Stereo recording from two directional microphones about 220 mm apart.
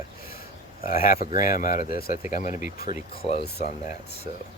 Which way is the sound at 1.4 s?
35° left (ahead or behind).